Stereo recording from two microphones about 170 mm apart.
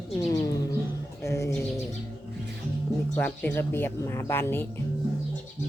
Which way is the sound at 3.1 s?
10° left (ahead or behind).